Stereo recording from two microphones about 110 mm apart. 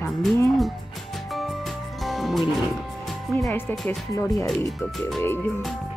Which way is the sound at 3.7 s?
Centre (ahead or behind).